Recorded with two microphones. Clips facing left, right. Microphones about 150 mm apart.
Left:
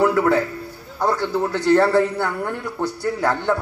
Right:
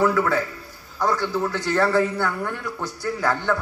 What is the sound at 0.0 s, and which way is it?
A man's voice, 30° left (ahead or behind).